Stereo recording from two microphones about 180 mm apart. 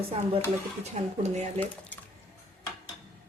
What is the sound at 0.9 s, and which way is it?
Speech, 40° right (ahead or behind).